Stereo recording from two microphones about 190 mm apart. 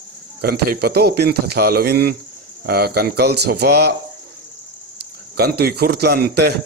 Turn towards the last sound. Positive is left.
turn(degrees=-55)  # may be behind; listen again after turning